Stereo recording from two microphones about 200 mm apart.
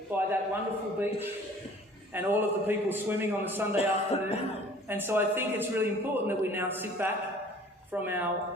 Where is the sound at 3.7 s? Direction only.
30° left (ahead or behind).